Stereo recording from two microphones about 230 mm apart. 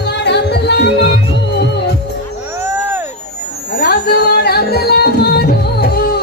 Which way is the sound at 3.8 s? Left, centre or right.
Left.